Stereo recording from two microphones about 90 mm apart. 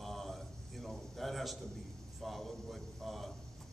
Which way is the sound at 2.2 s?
Centre (ahead or behind).